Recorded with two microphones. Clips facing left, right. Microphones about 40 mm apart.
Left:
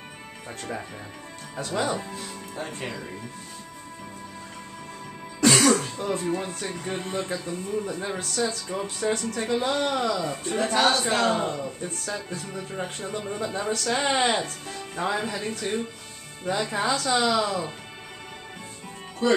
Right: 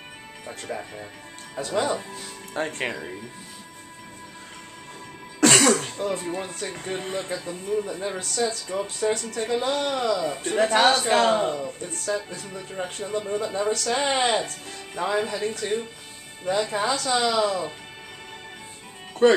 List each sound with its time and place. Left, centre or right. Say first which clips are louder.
0.5 s speech: right 1 dB; centre
2.5 s speech: right 7 dB; right
5.7 s music: even; right
5.9 s speech: even; centre
7.0 s speech: left 1 dB; centre
7.2 s speech: right 1 dB; centre
11.1 s a man's voice: right 3 dB; right
11.3 s speech: right 3 dB; centre
19.2 s speech: right 5 dB; right